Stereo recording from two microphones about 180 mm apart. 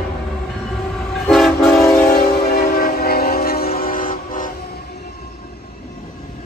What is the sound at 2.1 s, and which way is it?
Train, 60° left (ahead or behind).